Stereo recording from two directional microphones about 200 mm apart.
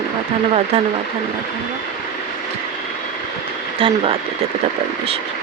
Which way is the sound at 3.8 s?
25° right (ahead or behind).